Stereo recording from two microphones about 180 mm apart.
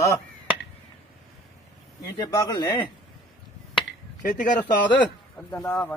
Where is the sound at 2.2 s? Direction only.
20° left (ahead or behind).